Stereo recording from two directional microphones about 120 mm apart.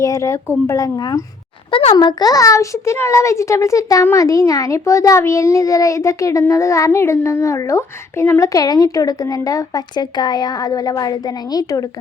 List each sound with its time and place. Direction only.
0.0 s speech: 25° left (ahead or behind)
1.7 s a child's voice: 60° left (ahead or behind)
2.0 s speech: 35° left (ahead or behind)